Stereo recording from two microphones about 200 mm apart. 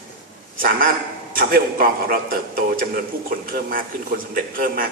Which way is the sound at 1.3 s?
45° right (ahead or behind).